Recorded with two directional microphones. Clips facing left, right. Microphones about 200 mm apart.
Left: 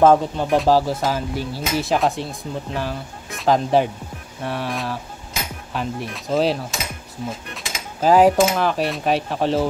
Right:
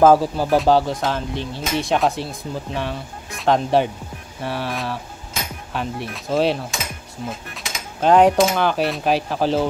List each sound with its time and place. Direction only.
0.0 s speech: 5° right (ahead or behind)